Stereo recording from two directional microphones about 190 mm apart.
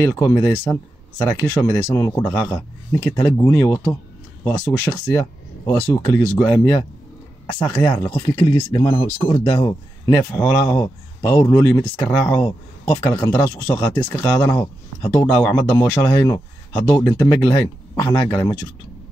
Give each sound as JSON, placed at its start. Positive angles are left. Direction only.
{"t": 0.0, "sound": "speech", "side_deg": 15}
{"t": 5.7, "sound": "speech", "side_deg": 5}
{"t": 8.1, "sound": "speech", "side_deg": 20}